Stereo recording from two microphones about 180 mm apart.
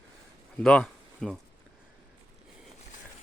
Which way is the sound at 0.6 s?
5° left (ahead or behind).